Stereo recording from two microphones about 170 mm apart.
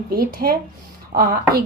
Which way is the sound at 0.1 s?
60° right (ahead or behind).